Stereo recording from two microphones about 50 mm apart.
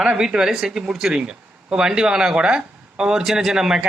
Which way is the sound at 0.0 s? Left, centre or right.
Centre.